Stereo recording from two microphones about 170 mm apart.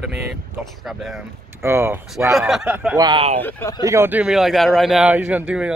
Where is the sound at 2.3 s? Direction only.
Centre (ahead or behind).